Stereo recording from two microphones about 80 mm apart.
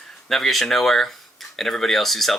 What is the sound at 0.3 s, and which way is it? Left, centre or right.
Speech, centre.